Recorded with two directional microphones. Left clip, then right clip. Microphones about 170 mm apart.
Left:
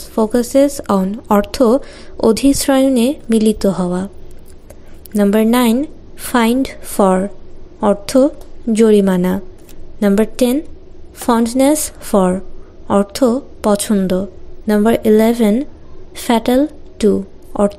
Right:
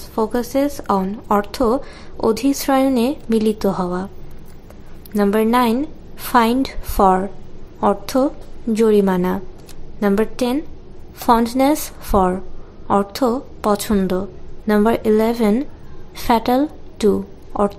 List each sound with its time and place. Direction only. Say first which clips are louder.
0.1 s a woman's voice: left 5 dB; 30° left (ahead or behind)
5.1 s a woman's voice: left 2 dB; 30° left (ahead or behind)